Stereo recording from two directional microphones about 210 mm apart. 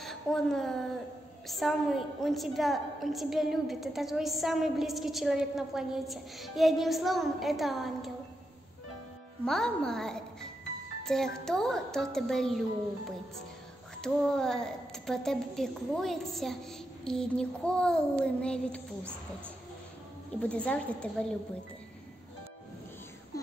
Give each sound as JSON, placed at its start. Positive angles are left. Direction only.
{"t": 0.0, "sound": "a woman's voice", "side_deg": 0}
{"t": 9.4, "sound": "a woman's voice", "side_deg": 5}
{"t": 14.0, "sound": "a woman's voice", "side_deg": 5}
{"t": 20.3, "sound": "speech", "side_deg": 5}